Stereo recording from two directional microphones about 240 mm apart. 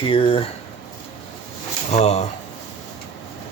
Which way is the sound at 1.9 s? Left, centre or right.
Left.